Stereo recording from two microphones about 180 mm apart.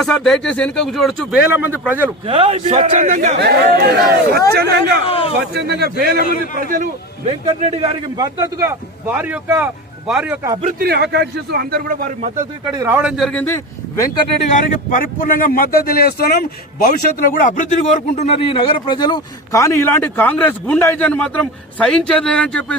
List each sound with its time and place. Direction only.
0.0 s a man's voice: centre (ahead or behind)
2.2 s a man's voice: 30° right (ahead or behind)
3.3 s a man's voice: 65° right (ahead or behind)
5.0 s a sound: 30° left (ahead or behind)
5.4 s a man's voice: 65° right (ahead or behind); by 6.9 s 50° right (ahead or behind)
7.3 s a man's voice: 35° right (ahead or behind)
8.1 s a man's voice: 20° right (ahead or behind)
10.8 s a man's voice: 65° right (ahead or behind)
12.7 s a man's voice: 15° right (ahead or behind)
13.0 s a man's voice: centre (ahead or behind); by 14.1 s 15° left (ahead or behind)
14.5 s speech: 50° left (ahead or behind); by 22.8 s 5° left (ahead or behind)